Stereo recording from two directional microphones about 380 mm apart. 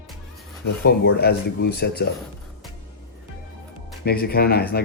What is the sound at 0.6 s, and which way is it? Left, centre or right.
Speech, left.